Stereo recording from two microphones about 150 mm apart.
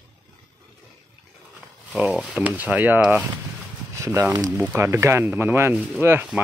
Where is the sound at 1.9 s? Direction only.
5° right (ahead or behind).